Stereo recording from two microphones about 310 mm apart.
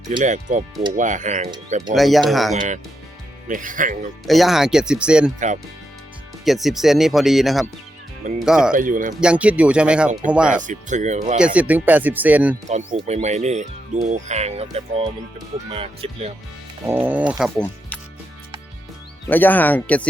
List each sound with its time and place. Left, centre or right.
0.1 s speech: right
2.0 s speech: centre
3.5 s speech: right
4.3 s speech: centre
6.4 s speech: centre
8.7 s speech: right
9.2 s speech: centre
10.5 s speech: right
11.3 s speech: centre
12.6 s speech: right
16.8 s speech: centre
19.3 s speech: centre